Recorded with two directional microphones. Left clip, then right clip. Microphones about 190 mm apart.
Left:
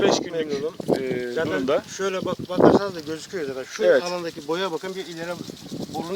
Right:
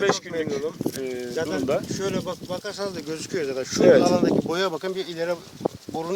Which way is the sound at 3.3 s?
45° right (ahead or behind).